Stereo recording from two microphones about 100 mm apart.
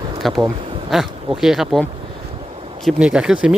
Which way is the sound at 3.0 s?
10° right (ahead or behind).